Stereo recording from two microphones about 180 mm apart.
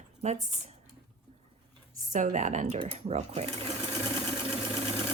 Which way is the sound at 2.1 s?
45° right (ahead or behind).